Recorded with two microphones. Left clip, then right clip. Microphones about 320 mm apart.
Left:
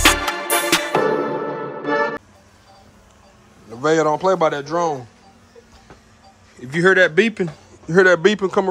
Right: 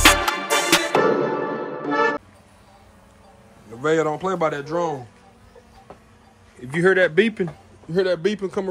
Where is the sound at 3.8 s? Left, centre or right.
Centre.